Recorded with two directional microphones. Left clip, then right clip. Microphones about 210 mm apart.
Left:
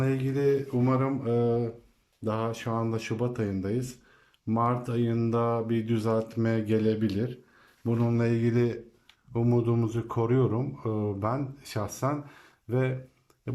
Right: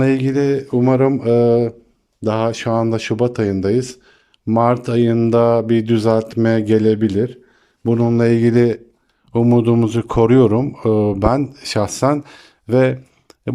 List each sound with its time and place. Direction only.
0.0 s speech: 45° right (ahead or behind)